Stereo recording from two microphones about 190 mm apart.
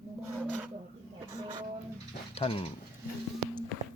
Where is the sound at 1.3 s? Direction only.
20° right (ahead or behind).